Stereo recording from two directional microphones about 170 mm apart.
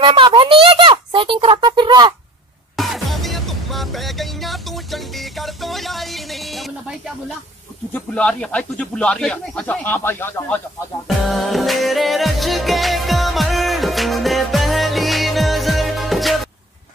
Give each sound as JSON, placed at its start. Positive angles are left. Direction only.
{"t": 0.0, "sound": "a child's voice", "side_deg": -30}
{"t": 2.7, "sound": "music", "side_deg": 0}
{"t": 7.9, "sound": "speech", "side_deg": 5}
{"t": 11.2, "sound": "music", "side_deg": 0}